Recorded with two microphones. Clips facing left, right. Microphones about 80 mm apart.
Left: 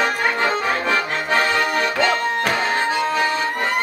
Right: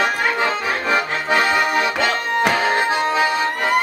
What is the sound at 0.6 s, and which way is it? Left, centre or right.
Accordion, centre.